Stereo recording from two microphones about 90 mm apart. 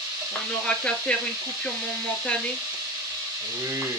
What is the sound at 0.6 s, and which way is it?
Speech, 10° left (ahead or behind).